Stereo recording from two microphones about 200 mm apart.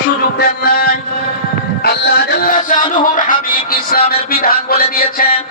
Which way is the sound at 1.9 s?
50° left (ahead or behind).